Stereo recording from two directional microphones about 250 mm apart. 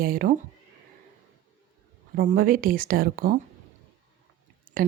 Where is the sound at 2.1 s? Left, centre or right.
Right.